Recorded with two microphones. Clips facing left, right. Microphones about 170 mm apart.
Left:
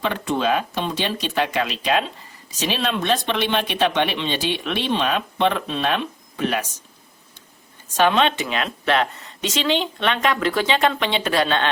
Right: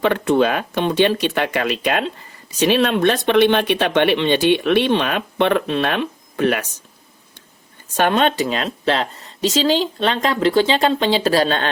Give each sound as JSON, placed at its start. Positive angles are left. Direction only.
{"t": 0.0, "sound": "speech", "side_deg": -60}
{"t": 7.9, "sound": "a woman's voice", "side_deg": -50}